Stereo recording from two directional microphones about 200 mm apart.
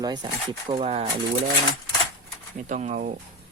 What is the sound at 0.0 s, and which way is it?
Speech, 20° right (ahead or behind).